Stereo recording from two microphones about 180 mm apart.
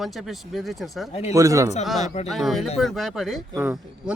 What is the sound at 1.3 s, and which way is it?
Speech, 20° right (ahead or behind).